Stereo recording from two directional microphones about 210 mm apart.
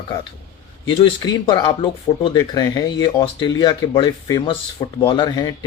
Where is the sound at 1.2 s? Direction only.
20° left (ahead or behind).